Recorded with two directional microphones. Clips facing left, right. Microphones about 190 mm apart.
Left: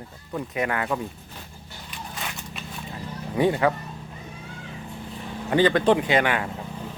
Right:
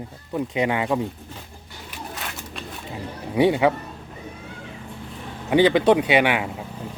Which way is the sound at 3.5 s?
10° right (ahead or behind).